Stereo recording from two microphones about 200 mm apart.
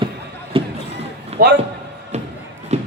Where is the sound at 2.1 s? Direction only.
35° right (ahead or behind).